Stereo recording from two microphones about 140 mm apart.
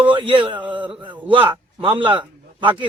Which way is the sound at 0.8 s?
10° right (ahead or behind).